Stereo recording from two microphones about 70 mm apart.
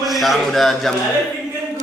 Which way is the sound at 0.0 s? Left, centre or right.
Centre.